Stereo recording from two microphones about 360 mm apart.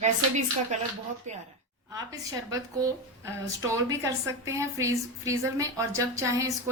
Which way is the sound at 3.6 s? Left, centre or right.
Centre.